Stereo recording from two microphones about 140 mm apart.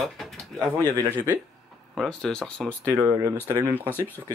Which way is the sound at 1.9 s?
Centre (ahead or behind).